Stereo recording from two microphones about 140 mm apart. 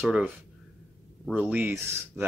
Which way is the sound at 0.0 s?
5° right (ahead or behind).